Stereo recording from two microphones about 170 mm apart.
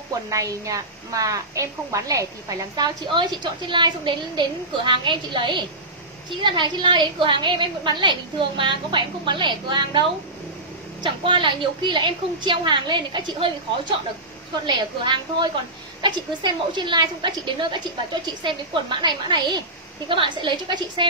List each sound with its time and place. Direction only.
0.3 s speech: 20° right (ahead or behind)